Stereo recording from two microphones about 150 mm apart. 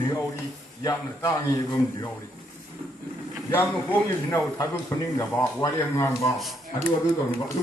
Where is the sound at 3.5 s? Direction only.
15° left (ahead or behind).